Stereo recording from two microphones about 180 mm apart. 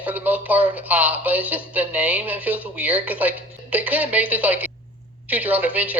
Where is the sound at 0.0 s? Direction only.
10° right (ahead or behind).